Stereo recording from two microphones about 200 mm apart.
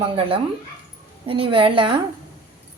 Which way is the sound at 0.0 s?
30° right (ahead or behind).